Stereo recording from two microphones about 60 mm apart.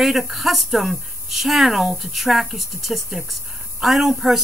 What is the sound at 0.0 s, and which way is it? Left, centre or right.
Speech, centre.